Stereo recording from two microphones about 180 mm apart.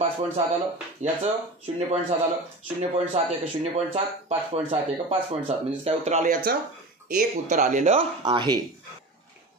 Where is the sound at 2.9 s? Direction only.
35° right (ahead or behind).